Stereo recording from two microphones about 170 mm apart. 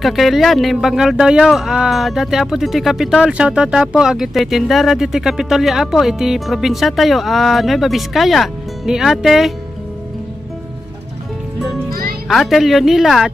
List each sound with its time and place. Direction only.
0.0 s speech: centre (ahead or behind)
11.9 s music: 60° right (ahead or behind)
12.3 s speech: centre (ahead or behind)